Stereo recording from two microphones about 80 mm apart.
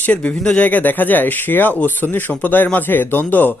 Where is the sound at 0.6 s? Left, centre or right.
Left.